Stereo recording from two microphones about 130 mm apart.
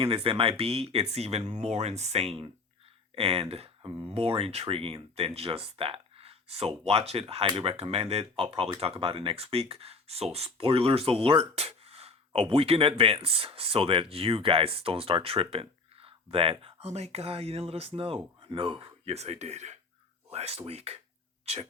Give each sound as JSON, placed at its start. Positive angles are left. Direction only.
{"t": 0.0, "sound": "speech", "side_deg": -45}
{"t": 19.1, "sound": "speech", "side_deg": -55}